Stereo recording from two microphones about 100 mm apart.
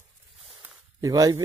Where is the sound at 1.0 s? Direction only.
40° right (ahead or behind).